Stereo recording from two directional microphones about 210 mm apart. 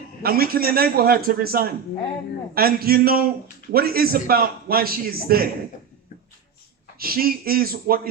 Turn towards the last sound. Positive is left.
turn(degrees=-45)  # may be behind; listen again after turning